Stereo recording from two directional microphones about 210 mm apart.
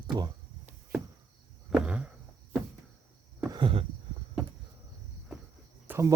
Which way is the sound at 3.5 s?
25° right (ahead or behind).